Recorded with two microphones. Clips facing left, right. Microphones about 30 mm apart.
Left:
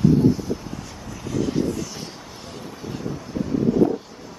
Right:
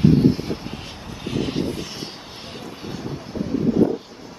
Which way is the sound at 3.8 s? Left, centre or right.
Centre.